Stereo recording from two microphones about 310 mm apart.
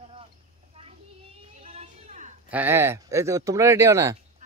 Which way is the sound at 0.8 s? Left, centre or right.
Centre.